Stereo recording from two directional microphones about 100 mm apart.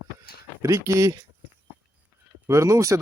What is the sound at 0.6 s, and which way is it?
Speech, 30° right (ahead or behind).